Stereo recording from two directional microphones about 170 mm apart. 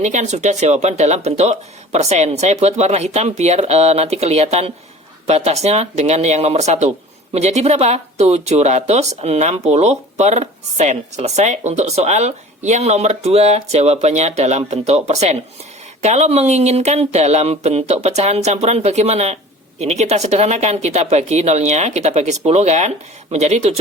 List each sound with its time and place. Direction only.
0.0 s speech: 45° right (ahead or behind)